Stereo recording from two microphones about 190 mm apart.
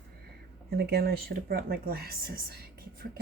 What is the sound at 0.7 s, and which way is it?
Speech, 55° right (ahead or behind).